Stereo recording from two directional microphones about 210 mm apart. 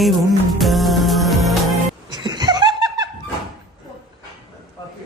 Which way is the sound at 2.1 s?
20° right (ahead or behind).